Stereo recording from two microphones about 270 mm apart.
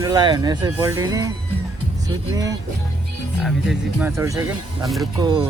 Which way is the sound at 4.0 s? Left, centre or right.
Centre.